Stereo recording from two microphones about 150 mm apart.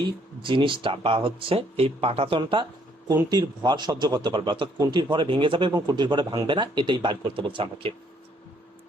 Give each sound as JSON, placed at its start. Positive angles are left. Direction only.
{"t": 0.4, "sound": "speech", "side_deg": -35}